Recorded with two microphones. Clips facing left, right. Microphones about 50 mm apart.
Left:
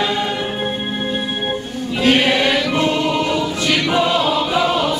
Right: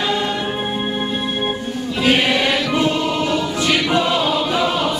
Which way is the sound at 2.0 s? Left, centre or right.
Centre.